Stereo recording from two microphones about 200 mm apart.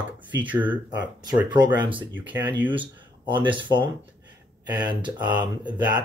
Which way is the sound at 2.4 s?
25° right (ahead or behind).